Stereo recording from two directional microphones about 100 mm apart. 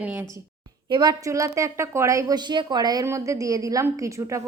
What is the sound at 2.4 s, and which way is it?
Speech, 45° right (ahead or behind).